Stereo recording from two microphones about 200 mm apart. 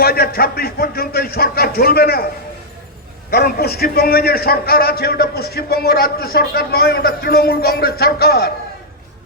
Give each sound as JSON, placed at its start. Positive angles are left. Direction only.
{"t": 0.0, "sound": "a man's voice", "side_deg": 50}
{"t": 3.2, "sound": "a man's voice", "side_deg": 50}